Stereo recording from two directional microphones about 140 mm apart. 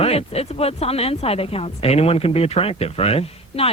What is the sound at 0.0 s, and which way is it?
Speech, 45° left (ahead or behind).